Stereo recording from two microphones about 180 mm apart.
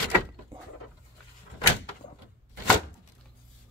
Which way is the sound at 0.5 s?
15° right (ahead or behind).